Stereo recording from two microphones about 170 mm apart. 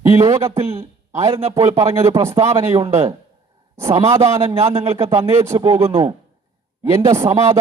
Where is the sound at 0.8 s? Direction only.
15° right (ahead or behind).